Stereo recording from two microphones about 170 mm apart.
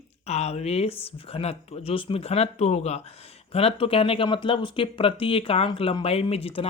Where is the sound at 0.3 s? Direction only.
40° left (ahead or behind).